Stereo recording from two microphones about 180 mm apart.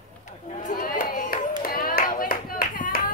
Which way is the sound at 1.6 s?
50° left (ahead or behind).